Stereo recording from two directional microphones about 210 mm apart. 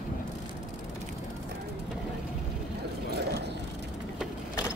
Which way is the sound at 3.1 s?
50° right (ahead or behind).